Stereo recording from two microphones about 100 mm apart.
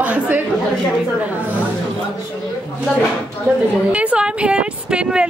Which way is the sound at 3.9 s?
10° right (ahead or behind).